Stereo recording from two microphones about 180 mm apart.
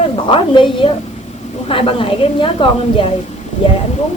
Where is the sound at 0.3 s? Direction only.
30° left (ahead or behind).